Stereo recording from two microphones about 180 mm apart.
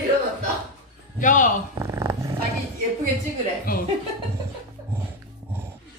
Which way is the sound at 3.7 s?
55° left (ahead or behind).